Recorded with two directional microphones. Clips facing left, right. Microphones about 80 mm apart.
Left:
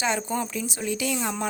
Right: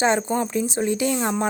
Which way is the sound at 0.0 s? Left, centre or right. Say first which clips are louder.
Right 6 dB; right.